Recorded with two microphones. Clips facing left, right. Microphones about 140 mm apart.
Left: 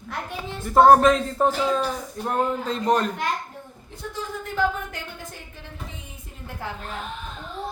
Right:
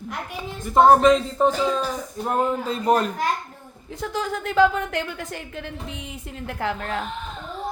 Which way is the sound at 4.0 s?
90° right.